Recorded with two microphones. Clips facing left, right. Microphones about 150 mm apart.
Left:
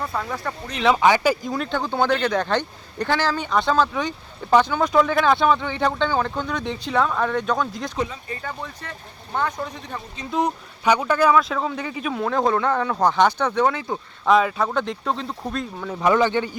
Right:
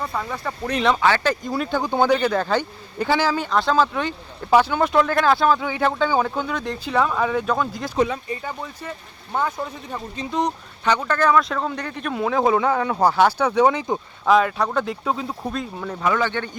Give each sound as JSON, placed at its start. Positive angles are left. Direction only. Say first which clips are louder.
{"t": 0.0, "sound": "speech", "louder": "even", "side_deg": 0}
{"t": 0.9, "sound": "speech", "louder": "left 2 dB", "side_deg": 15}
{"t": 7.9, "sound": "speech", "louder": "right 7 dB", "side_deg": -65}
{"t": 8.3, "sound": "speech", "louder": "right 2 dB", "side_deg": -10}
{"t": 10.3, "sound": "speech", "louder": "left 1 dB", "side_deg": 10}
{"t": 14.3, "sound": "speech", "louder": "right 1 dB", "side_deg": 0}
{"t": 16.2, "sound": "speech", "louder": "left 4 dB", "side_deg": 15}